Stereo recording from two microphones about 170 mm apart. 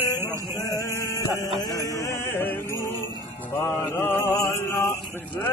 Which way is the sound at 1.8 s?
15° left (ahead or behind).